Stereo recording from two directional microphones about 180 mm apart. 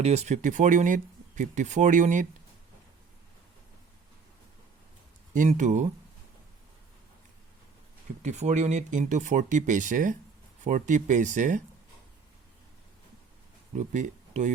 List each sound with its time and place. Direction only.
0.0 s speech: 35° right (ahead or behind)
5.3 s speech: 45° right (ahead or behind)
8.2 s speech: 40° right (ahead or behind)
13.7 s speech: 40° right (ahead or behind)